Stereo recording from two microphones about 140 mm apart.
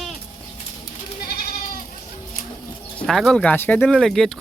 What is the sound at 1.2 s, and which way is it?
Goat, 90° left.